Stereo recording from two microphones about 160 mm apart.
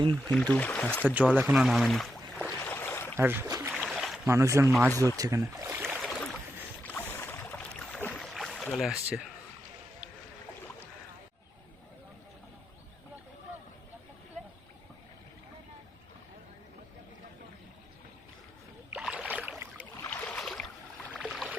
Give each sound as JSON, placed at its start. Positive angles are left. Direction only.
{"t": 0.3, "sound": "speech", "side_deg": 5}
{"t": 1.0, "sound": "speech", "side_deg": -10}
{"t": 2.6, "sound": "a sound", "side_deg": 15}
{"t": 3.2, "sound": "speech", "side_deg": -15}
{"t": 3.7, "sound": "boat", "side_deg": -5}
{"t": 4.3, "sound": "speech", "side_deg": -20}
{"t": 5.9, "sound": "boat", "side_deg": 0}
{"t": 6.8, "sound": "boat", "side_deg": 15}
{"t": 18.9, "sound": "rowboat", "side_deg": 0}
{"t": 19.3, "sound": "boat", "side_deg": -10}
{"t": 20.1, "sound": "boat", "side_deg": 5}